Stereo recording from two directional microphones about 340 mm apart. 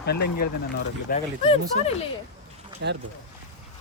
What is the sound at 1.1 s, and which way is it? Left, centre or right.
Speech, centre.